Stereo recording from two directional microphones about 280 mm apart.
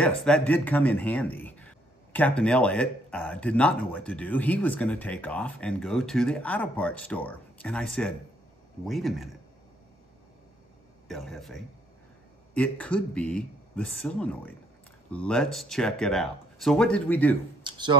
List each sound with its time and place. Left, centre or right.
0.0 s speech: centre
11.1 s speech: centre
17.6 s a sound: centre